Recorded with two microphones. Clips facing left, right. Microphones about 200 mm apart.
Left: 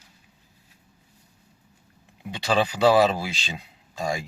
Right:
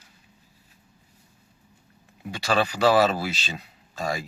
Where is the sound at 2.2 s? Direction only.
15° left (ahead or behind).